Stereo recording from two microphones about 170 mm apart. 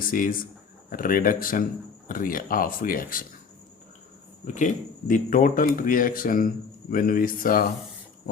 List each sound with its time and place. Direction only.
0.0 s speech: 55° left (ahead or behind)
4.5 s speech: 50° left (ahead or behind)